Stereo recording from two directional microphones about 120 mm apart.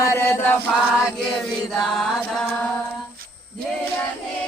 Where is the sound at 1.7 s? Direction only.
Centre (ahead or behind).